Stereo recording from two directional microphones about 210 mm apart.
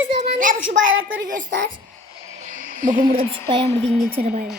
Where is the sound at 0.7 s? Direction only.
60° right (ahead or behind).